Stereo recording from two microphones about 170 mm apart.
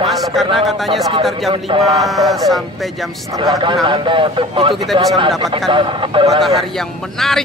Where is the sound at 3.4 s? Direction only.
25° right (ahead or behind).